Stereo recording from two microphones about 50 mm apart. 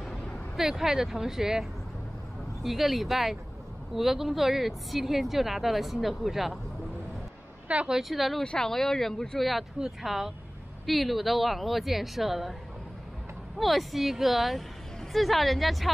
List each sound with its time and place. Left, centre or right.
0.6 s speech: centre
7.6 s speech: right
8.0 s speech: centre
8.5 s speech: centre
9.8 s speech: centre
13.6 s speech: centre